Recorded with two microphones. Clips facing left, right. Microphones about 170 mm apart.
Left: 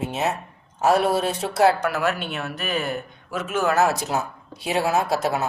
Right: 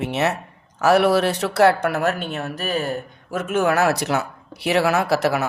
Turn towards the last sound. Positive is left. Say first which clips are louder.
# right 3 dB
turn(degrees=-75)  # may be behind; listen again after turning